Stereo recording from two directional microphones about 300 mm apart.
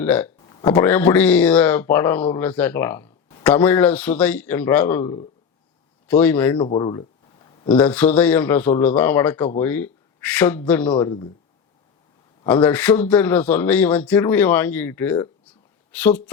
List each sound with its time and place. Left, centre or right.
0.0 s speech: centre
6.6 s a sound: centre
7.7 s speech: centre
10.9 s speech: centre
12.6 s speech: centre